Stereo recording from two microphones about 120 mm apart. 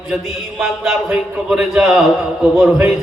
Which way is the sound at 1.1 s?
15° right (ahead or behind).